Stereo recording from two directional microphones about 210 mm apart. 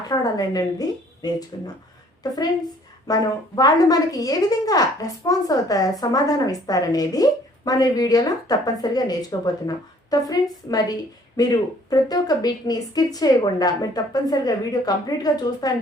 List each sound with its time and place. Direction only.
0.1 s a woman's voice: 20° left (ahead or behind)